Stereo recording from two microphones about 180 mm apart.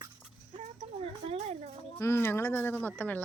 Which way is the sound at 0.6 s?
35° right (ahead or behind).